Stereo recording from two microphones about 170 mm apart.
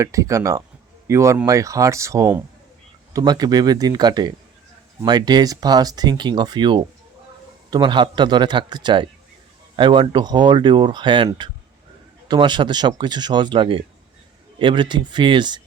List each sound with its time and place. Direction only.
0.0 s speech: 20° right (ahead or behind)